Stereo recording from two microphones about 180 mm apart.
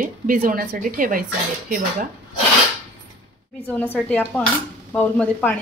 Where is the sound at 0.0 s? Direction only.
50° right (ahead or behind).